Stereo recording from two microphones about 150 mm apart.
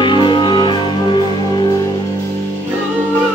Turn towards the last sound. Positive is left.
turn(degrees=30)  # may be behind; listen again after turning